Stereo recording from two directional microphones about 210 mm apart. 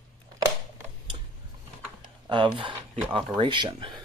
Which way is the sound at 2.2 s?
20° right (ahead or behind).